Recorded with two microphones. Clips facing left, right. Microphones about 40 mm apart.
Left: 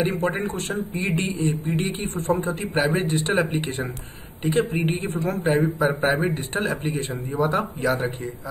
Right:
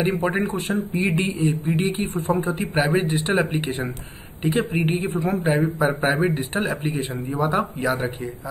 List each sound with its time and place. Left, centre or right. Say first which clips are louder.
0.0 s speech: right 2 dB; centre
2.0 s speech: right 1 dB; right
2.5 s a man's voice: right 2 dB; centre